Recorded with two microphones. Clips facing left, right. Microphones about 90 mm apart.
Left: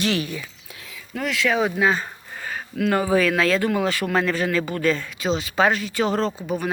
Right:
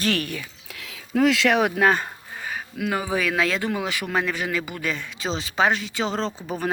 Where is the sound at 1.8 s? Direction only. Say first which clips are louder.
Right 1 dB; 55° right (ahead or behind).